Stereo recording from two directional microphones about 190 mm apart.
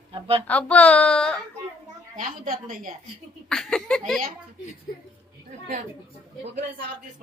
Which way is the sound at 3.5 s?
5° left (ahead or behind).